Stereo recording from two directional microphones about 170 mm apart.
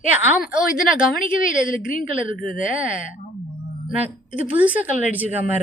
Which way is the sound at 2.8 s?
5° right (ahead or behind).